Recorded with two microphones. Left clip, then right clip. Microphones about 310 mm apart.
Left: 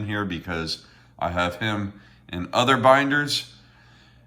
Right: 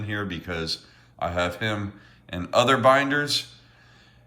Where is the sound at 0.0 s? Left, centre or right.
Centre.